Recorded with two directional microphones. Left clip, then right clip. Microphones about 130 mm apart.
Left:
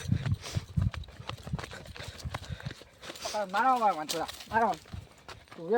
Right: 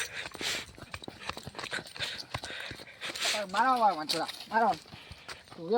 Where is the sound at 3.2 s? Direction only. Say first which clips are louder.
Even; centre (ahead or behind).